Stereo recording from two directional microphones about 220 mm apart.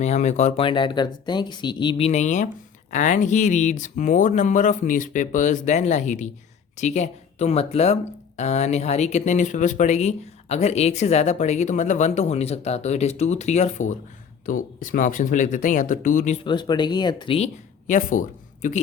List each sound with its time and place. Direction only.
0.0 s speech: 30° left (ahead or behind)